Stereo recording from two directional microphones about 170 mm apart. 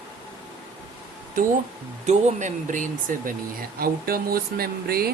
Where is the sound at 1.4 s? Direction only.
55° right (ahead or behind).